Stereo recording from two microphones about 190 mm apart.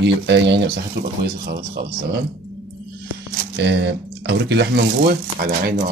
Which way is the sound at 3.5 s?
65° right (ahead or behind).